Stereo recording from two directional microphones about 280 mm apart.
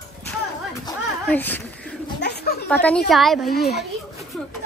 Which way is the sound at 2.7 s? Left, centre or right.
Centre.